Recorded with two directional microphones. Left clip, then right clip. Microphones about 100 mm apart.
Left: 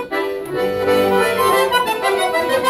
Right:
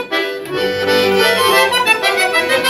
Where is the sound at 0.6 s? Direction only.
25° left (ahead or behind).